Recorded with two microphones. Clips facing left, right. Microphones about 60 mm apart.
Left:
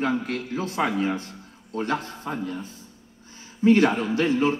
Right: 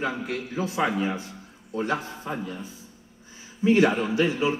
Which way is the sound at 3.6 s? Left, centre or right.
Left.